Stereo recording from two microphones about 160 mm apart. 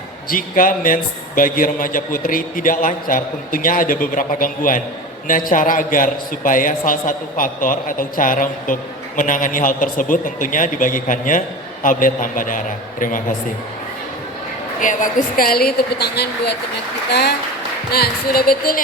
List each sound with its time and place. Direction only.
0.3 s a man's voice: 60° left (ahead or behind)
14.8 s a woman's voice: 55° left (ahead or behind); by 17.3 s 90° left
17.9 s a woman's voice: 75° left (ahead or behind)